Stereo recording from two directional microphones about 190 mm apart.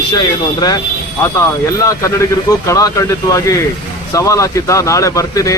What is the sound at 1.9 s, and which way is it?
Speech, 15° left (ahead or behind).